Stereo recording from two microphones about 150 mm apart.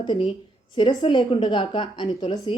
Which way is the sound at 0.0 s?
30° left (ahead or behind).